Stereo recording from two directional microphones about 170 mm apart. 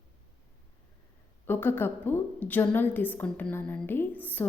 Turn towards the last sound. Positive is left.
turn(degrees=10)  # may be behind; listen again after turning